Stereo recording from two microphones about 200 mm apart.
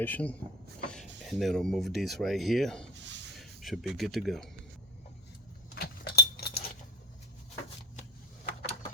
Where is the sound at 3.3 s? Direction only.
Centre (ahead or behind).